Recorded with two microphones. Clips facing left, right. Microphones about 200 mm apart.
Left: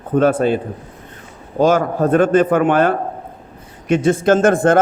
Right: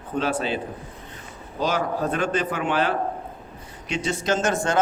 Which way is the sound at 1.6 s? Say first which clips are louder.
Left 10 dB; 50° left (ahead or behind).